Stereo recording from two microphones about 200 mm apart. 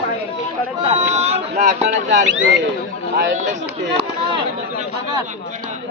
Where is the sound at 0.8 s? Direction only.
30° right (ahead or behind).